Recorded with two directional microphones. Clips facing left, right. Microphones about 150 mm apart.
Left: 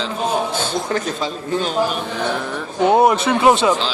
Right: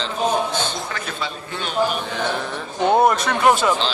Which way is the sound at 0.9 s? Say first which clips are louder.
Left 7 dB; 40° left (ahead or behind).